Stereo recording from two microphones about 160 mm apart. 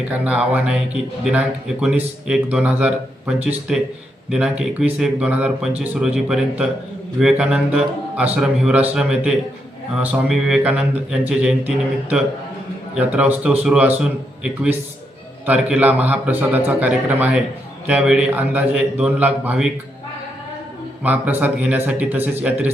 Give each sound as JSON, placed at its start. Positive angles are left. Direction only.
{"t": 0.1, "sound": "a man's voice", "side_deg": -10}
{"t": 21.0, "sound": "a man's voice", "side_deg": -10}